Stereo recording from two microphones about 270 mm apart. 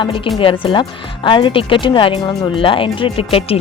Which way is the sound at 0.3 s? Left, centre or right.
Centre.